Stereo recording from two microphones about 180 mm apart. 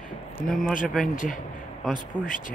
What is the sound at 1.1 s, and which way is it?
Speech, 45° left (ahead or behind).